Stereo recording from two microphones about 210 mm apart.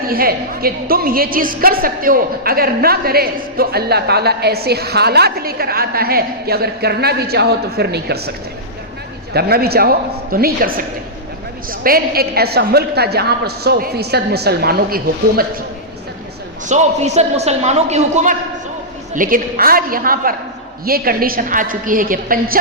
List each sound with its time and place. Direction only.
0.0 s a woman's voice: 45° right (ahead or behind)
9.3 s a woman's voice: 50° right (ahead or behind)
16.6 s a man's voice: 35° right (ahead or behind)